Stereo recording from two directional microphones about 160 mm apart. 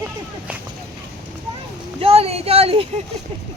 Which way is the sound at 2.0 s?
40° right (ahead or behind).